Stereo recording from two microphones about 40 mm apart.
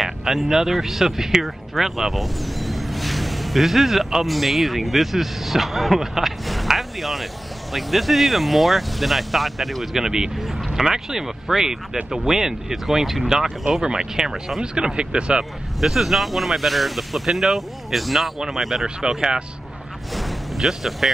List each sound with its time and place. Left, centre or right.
0.0 s speech: centre
6.7 s a sound: centre
7.7 s speech: centre
10.0 s speech: centre
15.8 s speech: centre
20.2 s a sound: centre